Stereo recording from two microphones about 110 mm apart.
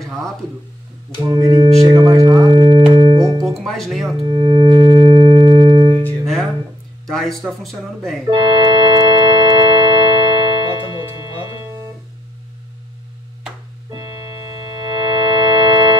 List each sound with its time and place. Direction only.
1.3 s speech: 40° right (ahead or behind)
2.2 s a sound: 40° right (ahead or behind)
2.6 s organ: 55° right (ahead or behind)
3.5 s speech: 5° left (ahead or behind)
4.2 s singing bowl: 50° right (ahead or behind)
7.1 s a sound: 5° left (ahead or behind)
7.6 s speech: centre (ahead or behind)
8.3 s organ: 50° right (ahead or behind)
14.9 s organ: 45° right (ahead or behind)